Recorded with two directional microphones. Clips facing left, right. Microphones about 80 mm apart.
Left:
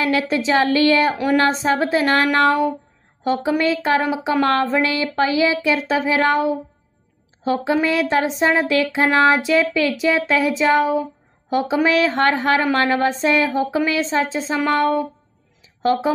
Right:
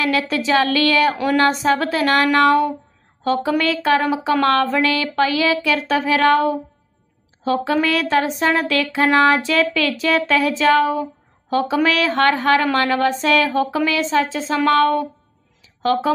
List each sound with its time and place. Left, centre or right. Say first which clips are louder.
0.0 s speech: left 1 dB; left
7.4 s speech: even; centre